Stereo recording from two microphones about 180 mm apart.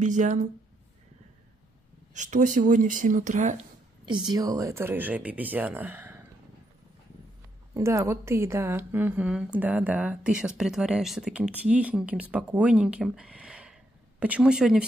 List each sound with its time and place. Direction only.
0.0 s speech: 45° right (ahead or behind)
2.1 s speech: 45° right (ahead or behind)
4.3 s speech: 20° right (ahead or behind)
7.7 s speech: 15° right (ahead or behind)